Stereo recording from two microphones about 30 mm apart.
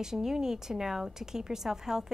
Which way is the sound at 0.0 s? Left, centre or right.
Centre.